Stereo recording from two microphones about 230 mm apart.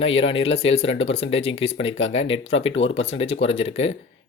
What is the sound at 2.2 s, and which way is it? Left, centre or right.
Speech, left.